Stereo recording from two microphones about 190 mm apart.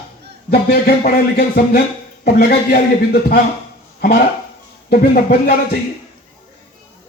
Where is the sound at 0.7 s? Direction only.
55° left (ahead or behind).